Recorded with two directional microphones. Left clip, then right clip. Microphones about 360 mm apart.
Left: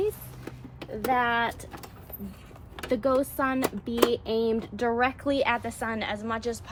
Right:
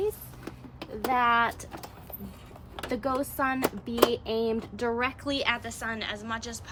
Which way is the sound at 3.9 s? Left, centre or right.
Centre.